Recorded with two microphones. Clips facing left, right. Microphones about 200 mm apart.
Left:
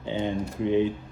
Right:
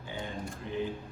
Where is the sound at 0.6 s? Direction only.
75° left (ahead or behind).